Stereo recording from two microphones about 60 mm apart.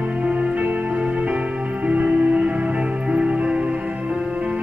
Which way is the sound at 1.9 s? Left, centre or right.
Right.